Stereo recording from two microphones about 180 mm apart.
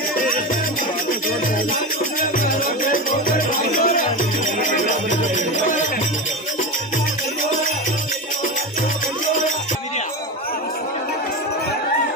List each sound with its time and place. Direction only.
1.7 s music: 50° left (ahead or behind)